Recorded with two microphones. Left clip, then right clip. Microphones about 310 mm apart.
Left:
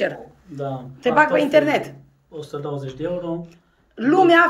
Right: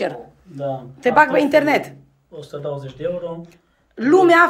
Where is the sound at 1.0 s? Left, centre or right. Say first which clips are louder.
Right 2 dB; centre.